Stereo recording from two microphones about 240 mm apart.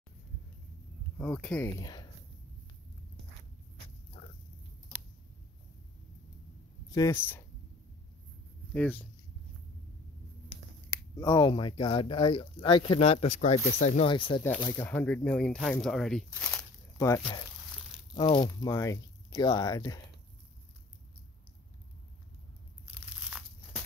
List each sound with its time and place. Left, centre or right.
1.1 s speech: centre
6.9 s speech: centre
8.7 s speech: centre
10.9 s speech: centre
14.8 s speech: centre
22.8 s crumpling: centre